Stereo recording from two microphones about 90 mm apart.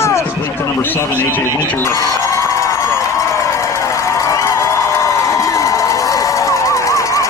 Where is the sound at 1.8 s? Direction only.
35° left (ahead or behind).